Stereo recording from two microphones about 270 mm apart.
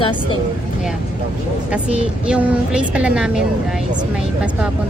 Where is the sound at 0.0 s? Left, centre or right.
Centre.